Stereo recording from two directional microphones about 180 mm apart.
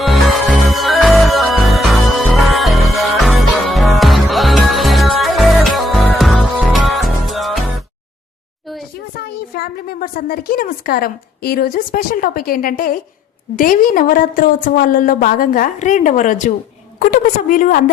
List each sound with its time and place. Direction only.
0.0 s zing: centre (ahead or behind)
9.2 s a woman's voice: 60° left (ahead or behind)